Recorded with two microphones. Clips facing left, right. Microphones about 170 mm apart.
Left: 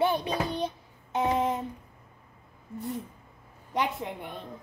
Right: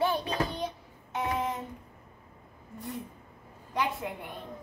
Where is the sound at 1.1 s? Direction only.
25° left (ahead or behind).